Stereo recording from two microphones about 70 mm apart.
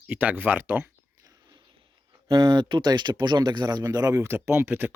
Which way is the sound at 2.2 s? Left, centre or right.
Right.